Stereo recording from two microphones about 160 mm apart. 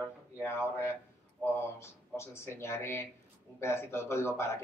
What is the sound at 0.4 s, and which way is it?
Speech, 15° left (ahead or behind).